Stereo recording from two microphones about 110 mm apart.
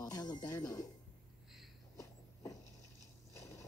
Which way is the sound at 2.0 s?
30° left (ahead or behind).